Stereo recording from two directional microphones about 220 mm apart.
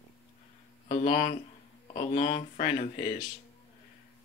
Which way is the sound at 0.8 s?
35° left (ahead or behind).